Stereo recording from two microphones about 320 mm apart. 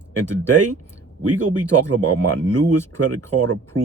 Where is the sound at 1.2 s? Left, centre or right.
Right.